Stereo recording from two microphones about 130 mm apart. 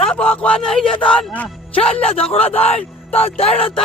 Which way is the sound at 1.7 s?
50° left (ahead or behind).